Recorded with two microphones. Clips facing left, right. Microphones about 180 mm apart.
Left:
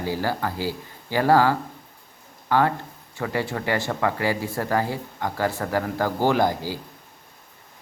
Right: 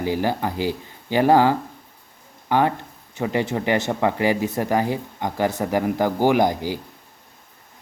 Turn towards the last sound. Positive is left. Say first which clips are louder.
# right 3 dB
turn(degrees=-20)  # may be behind; listen again after turning